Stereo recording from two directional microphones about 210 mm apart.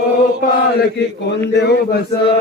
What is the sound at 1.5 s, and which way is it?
Speech, 55° left (ahead or behind).